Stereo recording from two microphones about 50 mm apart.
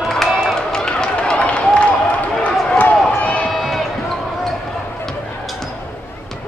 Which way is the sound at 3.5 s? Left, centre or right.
Centre.